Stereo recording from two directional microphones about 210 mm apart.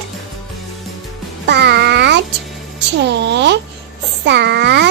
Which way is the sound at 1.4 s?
55° right (ahead or behind).